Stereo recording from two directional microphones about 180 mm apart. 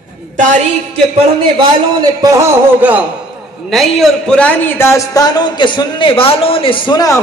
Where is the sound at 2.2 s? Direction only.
15° right (ahead or behind).